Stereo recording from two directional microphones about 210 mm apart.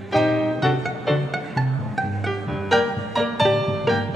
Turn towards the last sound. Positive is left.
turn(degrees=0)  # may be behind; listen again after turning